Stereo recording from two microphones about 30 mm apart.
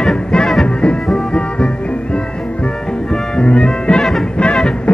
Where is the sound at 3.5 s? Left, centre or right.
Left.